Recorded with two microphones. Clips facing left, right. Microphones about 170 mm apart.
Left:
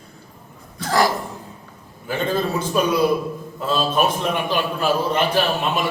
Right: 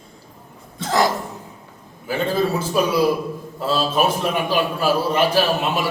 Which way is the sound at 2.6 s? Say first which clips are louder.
Left 1 dB; 5° right (ahead or behind).